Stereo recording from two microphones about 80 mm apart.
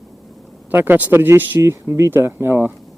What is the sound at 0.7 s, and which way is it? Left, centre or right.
Speech, right.